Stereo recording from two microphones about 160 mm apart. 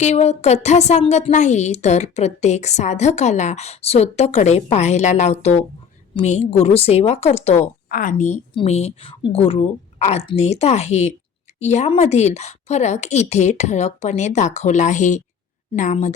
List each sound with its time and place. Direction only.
0.0 s a woman's voice: 45° left (ahead or behind)
7.9 s a woman's voice: 60° left (ahead or behind)
8.5 s a woman's voice: 40° left (ahead or behind)